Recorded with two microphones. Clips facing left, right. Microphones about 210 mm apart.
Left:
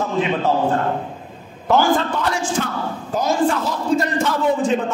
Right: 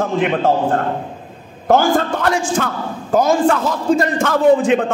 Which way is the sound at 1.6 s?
50° right (ahead or behind).